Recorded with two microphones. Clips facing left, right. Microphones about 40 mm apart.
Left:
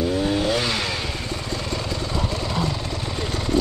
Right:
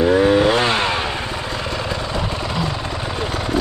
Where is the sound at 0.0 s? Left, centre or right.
Right.